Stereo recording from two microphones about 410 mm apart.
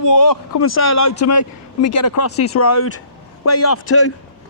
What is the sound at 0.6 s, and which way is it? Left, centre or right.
Speech, left.